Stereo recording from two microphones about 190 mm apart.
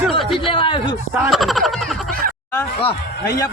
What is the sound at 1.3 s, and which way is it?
Speech, centre (ahead or behind).